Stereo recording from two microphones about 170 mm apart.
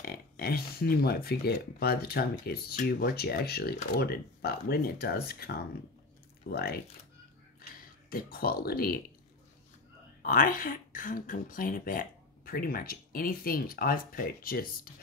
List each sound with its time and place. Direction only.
0.0 s speech: 65° left (ahead or behind)
8.1 s speech: 60° left (ahead or behind)
10.2 s speech: 55° left (ahead or behind)